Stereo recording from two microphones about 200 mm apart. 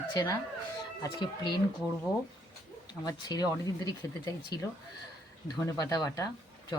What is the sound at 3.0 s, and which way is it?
Speech, 20° left (ahead or behind).